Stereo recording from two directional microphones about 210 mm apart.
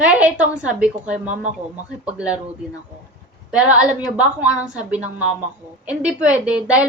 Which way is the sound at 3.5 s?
5° right (ahead or behind).